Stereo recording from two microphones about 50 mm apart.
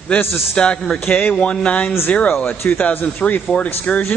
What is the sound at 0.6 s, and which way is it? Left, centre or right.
Speech, centre.